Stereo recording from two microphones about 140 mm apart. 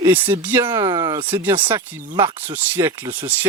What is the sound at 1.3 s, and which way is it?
Speech, 15° right (ahead or behind).